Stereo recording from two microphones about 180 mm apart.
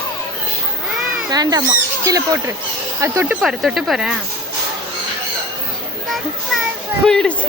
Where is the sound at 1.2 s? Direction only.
20° right (ahead or behind).